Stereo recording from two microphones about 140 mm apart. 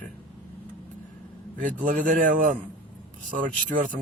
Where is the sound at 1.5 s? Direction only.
75° right (ahead or behind).